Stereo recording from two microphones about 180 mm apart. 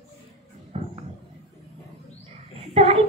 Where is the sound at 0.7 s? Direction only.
35° right (ahead or behind).